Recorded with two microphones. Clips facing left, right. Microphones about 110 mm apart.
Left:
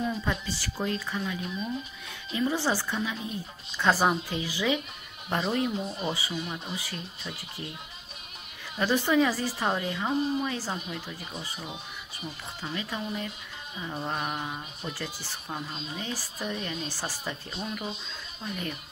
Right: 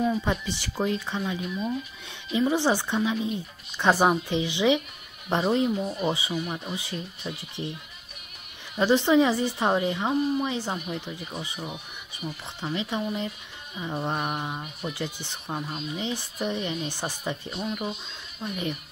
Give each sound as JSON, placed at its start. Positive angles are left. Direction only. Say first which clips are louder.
{"t": 0.2, "sound": "speech", "louder": "right 3 dB", "side_deg": -25}
{"t": 8.7, "sound": "speech", "louder": "right 4 dB", "side_deg": -25}
{"t": 12.7, "sound": "speech", "louder": "right 5 dB", "side_deg": -20}